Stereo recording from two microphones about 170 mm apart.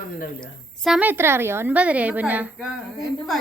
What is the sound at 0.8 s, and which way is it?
A woman's voice, 5° right (ahead or behind).